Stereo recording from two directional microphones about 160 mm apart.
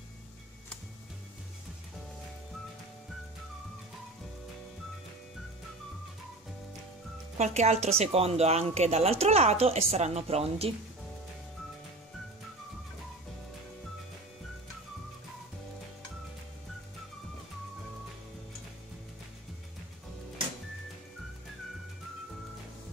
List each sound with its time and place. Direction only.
7.3 s a woman's voice: 45° right (ahead or behind)